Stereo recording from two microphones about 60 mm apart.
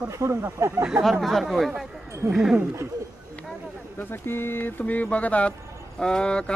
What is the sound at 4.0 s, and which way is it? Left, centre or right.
Speech, left.